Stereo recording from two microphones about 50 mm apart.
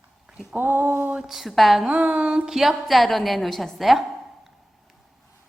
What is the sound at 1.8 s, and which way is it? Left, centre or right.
Speech, right.